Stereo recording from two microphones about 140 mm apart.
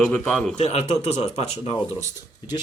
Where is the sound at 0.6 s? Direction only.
50° left (ahead or behind).